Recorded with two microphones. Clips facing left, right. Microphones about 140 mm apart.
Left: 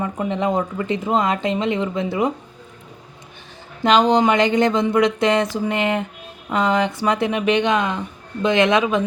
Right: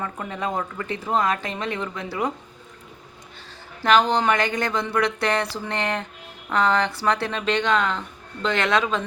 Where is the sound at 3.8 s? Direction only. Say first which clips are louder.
Left 4 dB; 20° left (ahead or behind).